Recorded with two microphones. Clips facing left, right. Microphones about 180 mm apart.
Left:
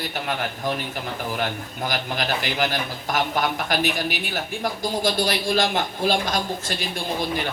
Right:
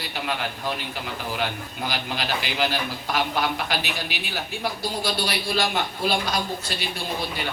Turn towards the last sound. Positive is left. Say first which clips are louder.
# left 2 dB
turn(degrees=45)  # may be behind; listen again after turning